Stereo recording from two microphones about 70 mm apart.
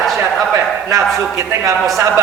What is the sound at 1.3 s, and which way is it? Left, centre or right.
Speech, right.